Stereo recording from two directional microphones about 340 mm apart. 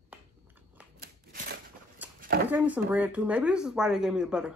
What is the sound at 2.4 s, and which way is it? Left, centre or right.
Speech, centre.